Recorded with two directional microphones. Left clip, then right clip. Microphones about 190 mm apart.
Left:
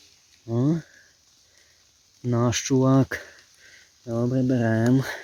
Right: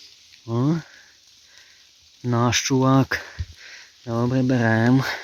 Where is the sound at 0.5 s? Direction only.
5° right (ahead or behind).